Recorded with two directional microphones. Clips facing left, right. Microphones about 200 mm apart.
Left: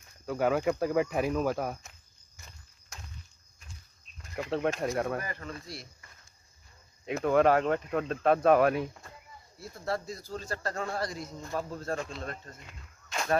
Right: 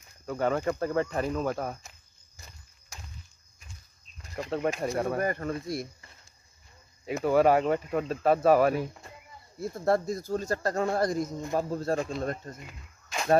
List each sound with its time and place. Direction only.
0.3 s speech: 5° left (ahead or behind)
4.4 s speech: centre (ahead or behind)
5.2 s speech: 50° right (ahead or behind)
7.1 s speech: 5° right (ahead or behind)
9.6 s speech: 50° right (ahead or behind)
12.6 s a sound: 5° right (ahead or behind)